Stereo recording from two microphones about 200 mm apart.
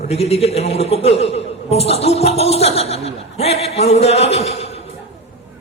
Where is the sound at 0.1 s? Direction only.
30° left (ahead or behind).